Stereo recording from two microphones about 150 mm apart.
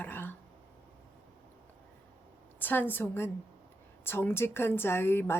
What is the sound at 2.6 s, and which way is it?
A woman's voice, 15° left (ahead or behind).